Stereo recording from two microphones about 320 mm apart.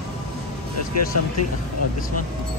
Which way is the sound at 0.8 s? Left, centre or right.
Left.